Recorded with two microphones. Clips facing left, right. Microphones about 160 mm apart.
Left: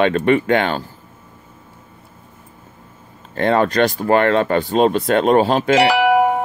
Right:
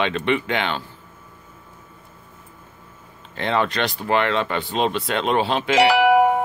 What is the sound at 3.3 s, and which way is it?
Speech, 45° left (ahead or behind).